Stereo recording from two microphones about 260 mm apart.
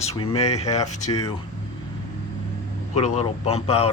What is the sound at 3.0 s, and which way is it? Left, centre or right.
Speech, left.